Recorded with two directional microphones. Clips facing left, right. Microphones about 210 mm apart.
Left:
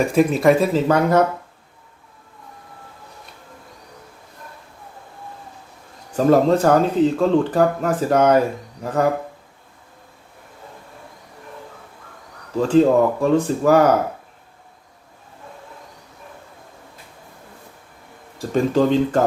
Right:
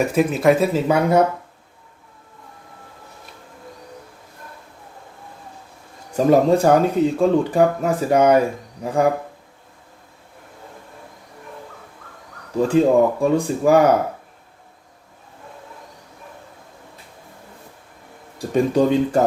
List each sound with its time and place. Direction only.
0.0 s speech: 5° right (ahead or behind)
6.1 s speech: 10° right (ahead or behind)
12.5 s speech: 10° right (ahead or behind)
18.5 s speech: 15° right (ahead or behind)